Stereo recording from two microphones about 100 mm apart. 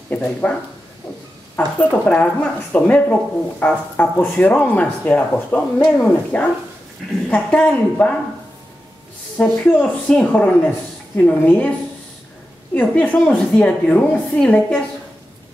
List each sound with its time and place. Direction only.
0.1 s speech: 15° left (ahead or behind)
1.8 s speech: 15° left (ahead or behind)
9.4 s speech: 15° left (ahead or behind)
12.7 s speech: 15° left (ahead or behind)